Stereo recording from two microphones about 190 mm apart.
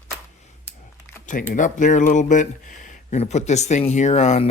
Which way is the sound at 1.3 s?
45° left (ahead or behind).